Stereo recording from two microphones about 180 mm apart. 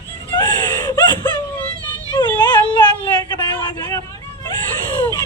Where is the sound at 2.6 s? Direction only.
25° left (ahead or behind).